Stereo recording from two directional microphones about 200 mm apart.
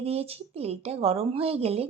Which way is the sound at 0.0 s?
30° right (ahead or behind).